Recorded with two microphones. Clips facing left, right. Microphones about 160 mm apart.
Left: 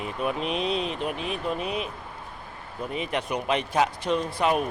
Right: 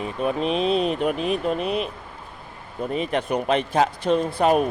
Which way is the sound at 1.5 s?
5° left (ahead or behind).